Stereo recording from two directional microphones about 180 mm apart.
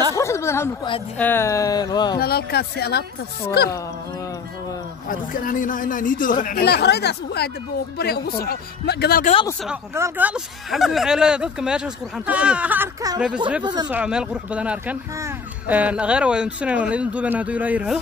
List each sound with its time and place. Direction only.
0.1 s a sound: 15° left (ahead or behind)
1.1 s speech: 10° left (ahead or behind)
2.1 s speech: 60° left (ahead or behind)
5.0 s a man's voice: 50° left (ahead or behind)
6.6 s speech: 65° left (ahead or behind)
9.2 s speech: 30° left (ahead or behind)
9.7 s speech: 10° right (ahead or behind)
13.8 s speech: 5° right (ahead or behind)